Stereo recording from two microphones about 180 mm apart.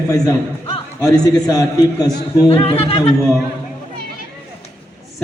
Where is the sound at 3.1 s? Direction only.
Centre (ahead or behind).